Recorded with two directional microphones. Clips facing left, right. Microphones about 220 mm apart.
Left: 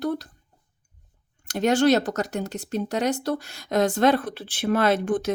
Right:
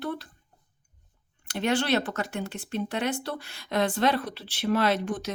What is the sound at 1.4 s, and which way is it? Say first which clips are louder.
Speech: left 7 dB; 45° left (ahead or behind).